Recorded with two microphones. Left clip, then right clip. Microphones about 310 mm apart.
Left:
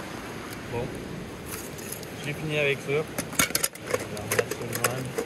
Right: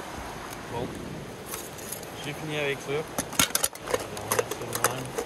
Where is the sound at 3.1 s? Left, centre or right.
Centre.